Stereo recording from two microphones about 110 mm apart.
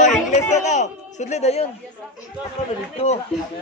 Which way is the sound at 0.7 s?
90° left.